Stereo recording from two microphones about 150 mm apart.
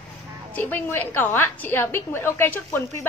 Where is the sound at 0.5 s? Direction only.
10° left (ahead or behind).